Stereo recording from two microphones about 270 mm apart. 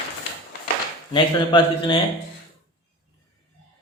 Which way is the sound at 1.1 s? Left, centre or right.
Centre.